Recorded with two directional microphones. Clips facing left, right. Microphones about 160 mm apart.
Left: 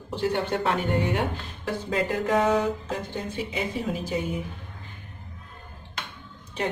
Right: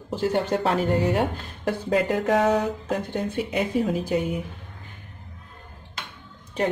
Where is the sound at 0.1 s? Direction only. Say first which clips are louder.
Right 3 dB; 40° right (ahead or behind).